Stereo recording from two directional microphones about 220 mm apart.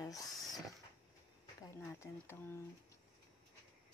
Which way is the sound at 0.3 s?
Centre (ahead or behind).